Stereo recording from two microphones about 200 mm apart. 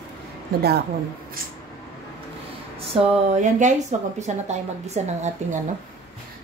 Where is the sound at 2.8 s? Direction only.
35° right (ahead or behind).